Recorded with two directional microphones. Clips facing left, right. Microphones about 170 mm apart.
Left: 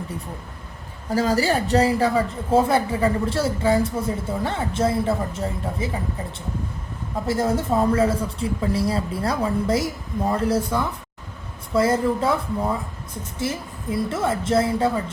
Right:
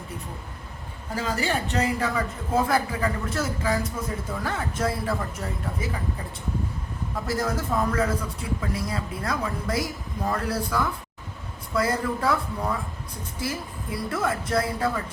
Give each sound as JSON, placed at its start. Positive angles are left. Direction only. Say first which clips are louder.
{"t": 1.1, "sound": "speech", "louder": "left 7 dB", "side_deg": 40}
{"t": 7.3, "sound": "speech", "louder": "left 6 dB", "side_deg": 25}